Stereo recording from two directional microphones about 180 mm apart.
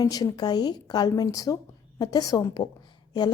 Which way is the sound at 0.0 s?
20° left (ahead or behind).